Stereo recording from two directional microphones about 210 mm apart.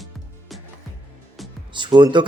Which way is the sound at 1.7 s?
20° right (ahead or behind).